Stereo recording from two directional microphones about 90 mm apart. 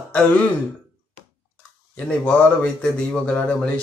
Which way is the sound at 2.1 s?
10° left (ahead or behind).